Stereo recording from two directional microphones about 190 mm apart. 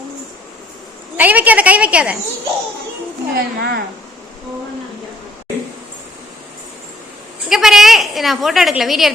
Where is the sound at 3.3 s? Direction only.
55° right (ahead or behind).